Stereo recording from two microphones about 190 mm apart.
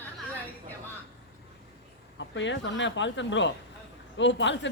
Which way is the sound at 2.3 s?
70° left (ahead or behind).